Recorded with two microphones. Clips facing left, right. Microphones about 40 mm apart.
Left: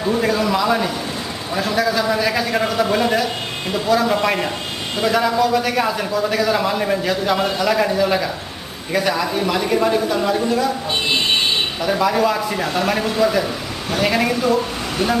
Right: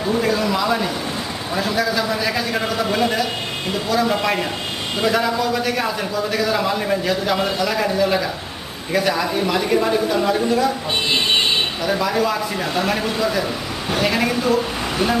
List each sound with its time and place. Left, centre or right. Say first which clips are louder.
0.2 s a sound: left 1 dB; centre
1.5 s a man's voice: left 2 dB; centre
11.8 s a man's voice: left 5 dB; centre